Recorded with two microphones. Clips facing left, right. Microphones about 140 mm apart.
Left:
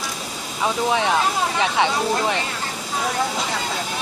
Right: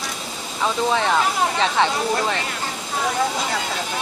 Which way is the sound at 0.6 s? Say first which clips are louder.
Even; 10° left (ahead or behind).